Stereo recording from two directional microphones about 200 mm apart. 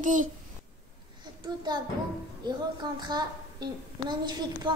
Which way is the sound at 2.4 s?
20° right (ahead or behind).